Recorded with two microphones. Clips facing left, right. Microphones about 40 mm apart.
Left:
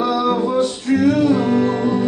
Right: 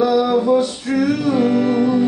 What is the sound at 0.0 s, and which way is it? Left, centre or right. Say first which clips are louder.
Male singing: right 2 dB; centre.